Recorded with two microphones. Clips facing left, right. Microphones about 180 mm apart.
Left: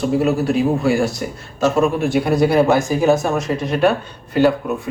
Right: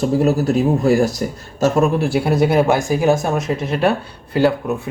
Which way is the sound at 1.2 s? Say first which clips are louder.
Right 1 dB; 40° right (ahead or behind).